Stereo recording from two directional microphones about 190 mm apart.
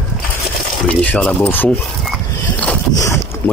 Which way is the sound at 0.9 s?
5° left (ahead or behind).